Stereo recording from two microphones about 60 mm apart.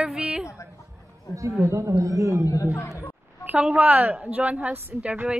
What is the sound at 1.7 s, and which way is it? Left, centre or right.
Speech, right.